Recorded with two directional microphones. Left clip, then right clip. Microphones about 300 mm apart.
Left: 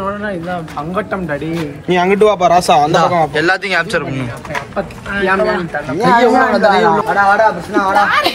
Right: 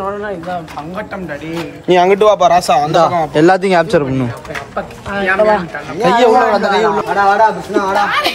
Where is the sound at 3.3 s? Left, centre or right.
Right.